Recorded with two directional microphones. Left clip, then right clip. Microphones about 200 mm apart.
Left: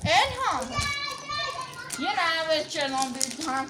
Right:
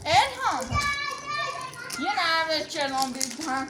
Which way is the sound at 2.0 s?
Centre (ahead or behind).